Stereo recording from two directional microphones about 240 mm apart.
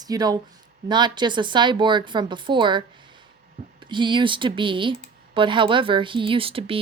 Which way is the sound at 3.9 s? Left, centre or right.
Centre.